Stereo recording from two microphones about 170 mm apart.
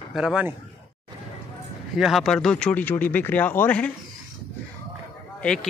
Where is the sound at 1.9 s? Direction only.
Centre (ahead or behind).